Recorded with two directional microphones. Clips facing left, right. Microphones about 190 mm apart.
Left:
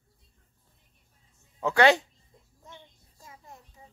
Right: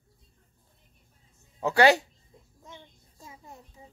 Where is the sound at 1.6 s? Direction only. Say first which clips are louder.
Right 1 dB; 5° right (ahead or behind).